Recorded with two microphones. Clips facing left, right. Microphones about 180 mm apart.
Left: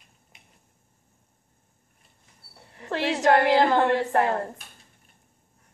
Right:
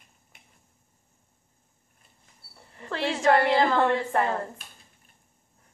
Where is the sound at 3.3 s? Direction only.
60° left (ahead or behind).